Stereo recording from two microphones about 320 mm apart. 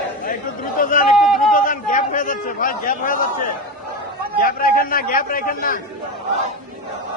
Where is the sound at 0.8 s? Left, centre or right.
Left.